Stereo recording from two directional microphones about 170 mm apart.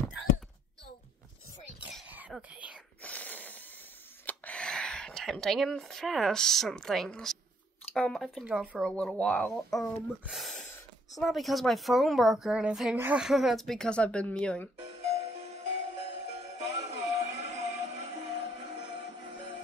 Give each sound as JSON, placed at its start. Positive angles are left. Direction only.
{"t": 1.9, "sound": "cough", "side_deg": -5}
{"t": 3.0, "sound": "a sound", "side_deg": 10}
{"t": 4.3, "sound": "speech", "side_deg": 5}
{"t": 14.9, "sound": "music", "side_deg": -40}